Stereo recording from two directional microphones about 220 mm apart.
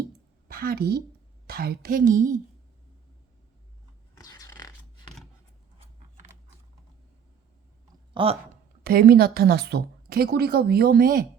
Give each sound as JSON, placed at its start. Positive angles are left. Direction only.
{"t": 0.4, "sound": "a woman's voice", "side_deg": -45}
{"t": 4.2, "sound": "a sound", "side_deg": 15}
{"t": 8.1, "sound": "speech", "side_deg": -25}
{"t": 8.8, "sound": "a woman's voice", "side_deg": -45}